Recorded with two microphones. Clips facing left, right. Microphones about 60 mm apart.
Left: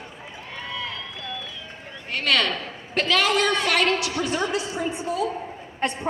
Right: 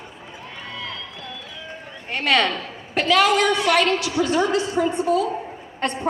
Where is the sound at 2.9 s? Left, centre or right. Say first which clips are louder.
Right 4 dB; centre.